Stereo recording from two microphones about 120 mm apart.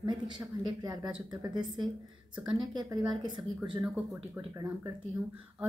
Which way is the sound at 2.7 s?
35° right (ahead or behind).